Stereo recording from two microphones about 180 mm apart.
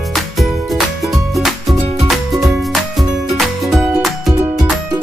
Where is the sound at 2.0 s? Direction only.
Centre (ahead or behind).